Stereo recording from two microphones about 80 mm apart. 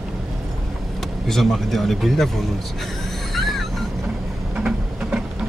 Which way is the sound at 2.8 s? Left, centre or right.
Centre.